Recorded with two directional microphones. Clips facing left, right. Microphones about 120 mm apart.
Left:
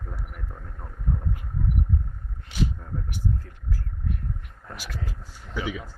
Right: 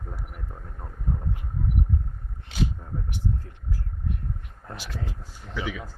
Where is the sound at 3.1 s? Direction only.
25° right (ahead or behind).